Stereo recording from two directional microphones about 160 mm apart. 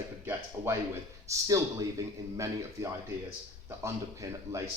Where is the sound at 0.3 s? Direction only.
15° right (ahead or behind).